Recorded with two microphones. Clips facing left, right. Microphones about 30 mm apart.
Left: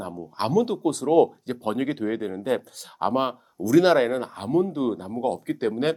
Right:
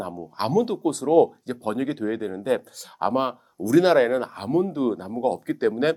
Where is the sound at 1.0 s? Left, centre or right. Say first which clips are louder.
Right 1 dB; left.